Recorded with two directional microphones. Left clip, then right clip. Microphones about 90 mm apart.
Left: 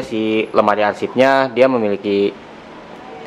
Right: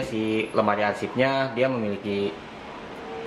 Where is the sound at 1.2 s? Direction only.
25° left (ahead or behind).